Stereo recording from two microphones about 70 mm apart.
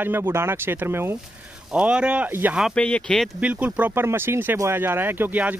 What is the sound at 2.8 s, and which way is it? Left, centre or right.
Speech, centre.